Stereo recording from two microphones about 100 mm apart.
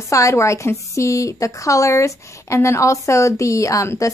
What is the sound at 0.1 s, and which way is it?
A woman's voice, 30° left (ahead or behind).